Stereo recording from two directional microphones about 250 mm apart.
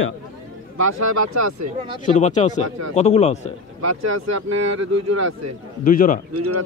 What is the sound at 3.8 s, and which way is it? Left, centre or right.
Speech, right.